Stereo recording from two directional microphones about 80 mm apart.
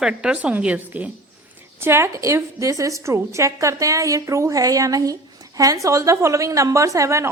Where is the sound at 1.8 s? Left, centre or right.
Right.